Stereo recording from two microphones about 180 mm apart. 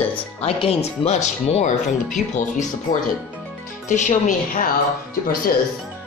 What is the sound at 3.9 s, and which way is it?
Speech, 40° left (ahead or behind).